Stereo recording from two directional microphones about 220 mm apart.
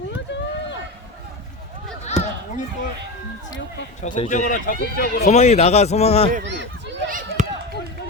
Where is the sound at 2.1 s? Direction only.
30° left (ahead or behind).